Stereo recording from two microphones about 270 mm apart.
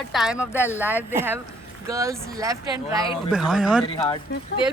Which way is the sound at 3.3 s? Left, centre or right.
Centre.